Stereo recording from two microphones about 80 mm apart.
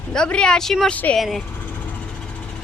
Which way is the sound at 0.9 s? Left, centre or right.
Centre.